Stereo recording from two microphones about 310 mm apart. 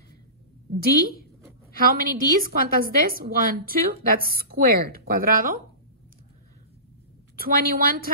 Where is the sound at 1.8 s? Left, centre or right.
Right.